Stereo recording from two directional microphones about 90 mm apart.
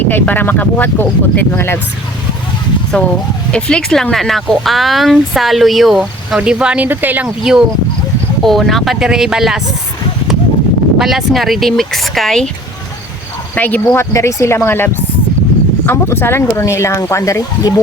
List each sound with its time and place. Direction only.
0.1 s speech: 20° left (ahead or behind)
2.9 s speech: 10° left (ahead or behind); by 7.3 s 20° right (ahead or behind)
7.5 s speech: 5° right (ahead or behind)
10.9 s speech: 5° right (ahead or behind)
13.6 s speech: 20° left (ahead or behind)
14.0 s speech: 35° left (ahead or behind)
15.9 s speech: 25° left (ahead or behind); by 17.7 s 40° left (ahead or behind)